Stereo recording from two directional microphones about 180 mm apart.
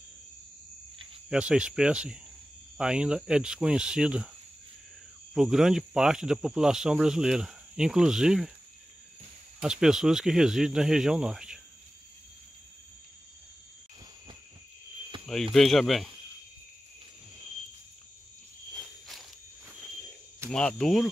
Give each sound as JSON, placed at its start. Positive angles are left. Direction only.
{"t": 1.3, "sound": "speech", "side_deg": -5}
{"t": 5.3, "sound": "speech", "side_deg": -5}
{"t": 9.6, "sound": "speech", "side_deg": -5}
{"t": 15.1, "sound": "a sound", "side_deg": -30}
{"t": 15.5, "sound": "speech", "side_deg": 0}
{"t": 20.4, "sound": "speech", "side_deg": 5}